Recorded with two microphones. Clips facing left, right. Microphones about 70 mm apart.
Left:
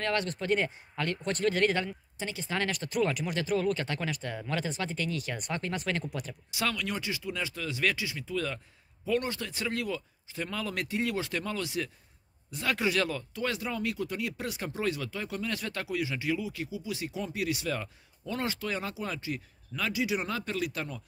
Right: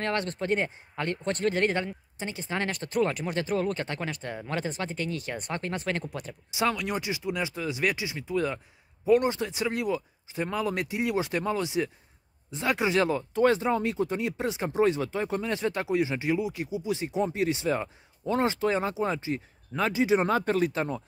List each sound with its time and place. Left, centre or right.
0.0 s speech: right